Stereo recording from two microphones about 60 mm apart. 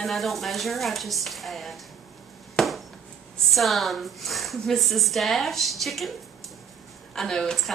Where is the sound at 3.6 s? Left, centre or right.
Centre.